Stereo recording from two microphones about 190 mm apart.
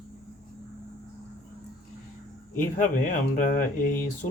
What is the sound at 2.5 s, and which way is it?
Speech, 45° left (ahead or behind).